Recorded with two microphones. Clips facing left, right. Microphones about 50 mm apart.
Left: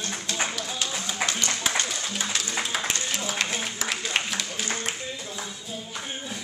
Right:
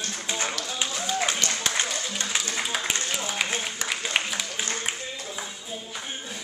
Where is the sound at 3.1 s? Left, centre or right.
Centre.